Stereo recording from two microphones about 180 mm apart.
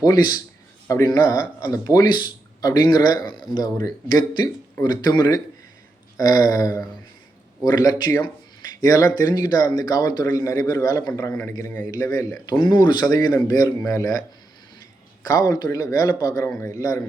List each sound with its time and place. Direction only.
0.0 s a man's voice: 20° left (ahead or behind)